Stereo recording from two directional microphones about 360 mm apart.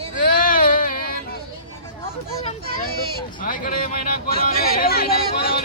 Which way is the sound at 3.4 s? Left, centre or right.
Left.